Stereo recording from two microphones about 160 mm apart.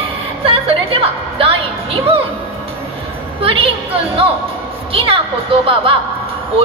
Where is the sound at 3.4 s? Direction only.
35° right (ahead or behind).